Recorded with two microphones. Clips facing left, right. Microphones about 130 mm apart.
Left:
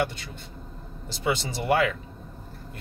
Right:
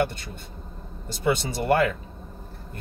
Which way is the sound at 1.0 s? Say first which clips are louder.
Right 3 dB; 50° right (ahead or behind).